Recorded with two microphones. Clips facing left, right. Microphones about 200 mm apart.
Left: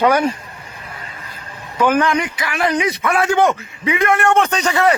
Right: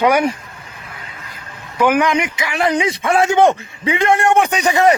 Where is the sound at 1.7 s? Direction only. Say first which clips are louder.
Right 1 dB; 15° right (ahead or behind); by 4.2 s 30° right (ahead or behind).